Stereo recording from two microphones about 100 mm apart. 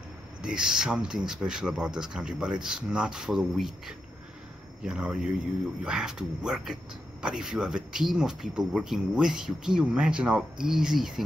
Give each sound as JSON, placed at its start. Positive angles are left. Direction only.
{"t": 0.4, "sound": "speech", "side_deg": -5}